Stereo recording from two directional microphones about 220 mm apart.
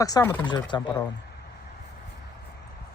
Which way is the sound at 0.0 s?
15° left (ahead or behind).